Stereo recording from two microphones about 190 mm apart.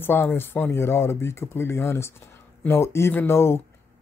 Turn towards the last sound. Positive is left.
turn(degrees=10)  # may be behind; listen again after turning